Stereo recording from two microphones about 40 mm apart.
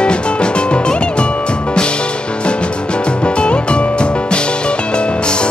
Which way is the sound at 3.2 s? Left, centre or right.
Left.